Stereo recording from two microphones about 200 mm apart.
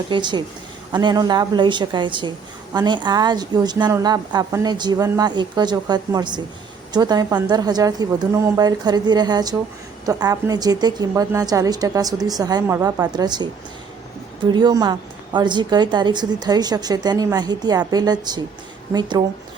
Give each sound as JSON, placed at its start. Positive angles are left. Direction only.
{"t": 0.1, "sound": "a woman's voice", "side_deg": -20}
{"t": 14.5, "sound": "a woman's voice", "side_deg": -20}